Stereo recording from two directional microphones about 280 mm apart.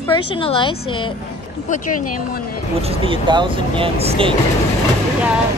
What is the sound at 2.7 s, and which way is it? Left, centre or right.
Speech, right.